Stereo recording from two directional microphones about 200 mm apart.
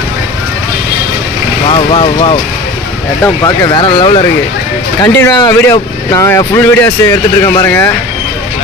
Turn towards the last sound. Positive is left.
turn(degrees=15)  # may be behind; listen again after turning